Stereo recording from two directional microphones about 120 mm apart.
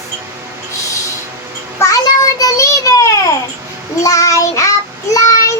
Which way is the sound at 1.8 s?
30° left (ahead or behind).